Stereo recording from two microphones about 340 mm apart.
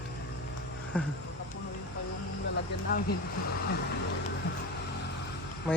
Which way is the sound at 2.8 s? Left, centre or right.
Left.